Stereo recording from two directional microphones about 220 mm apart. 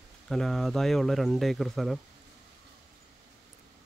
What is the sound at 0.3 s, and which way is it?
Speech, centre (ahead or behind).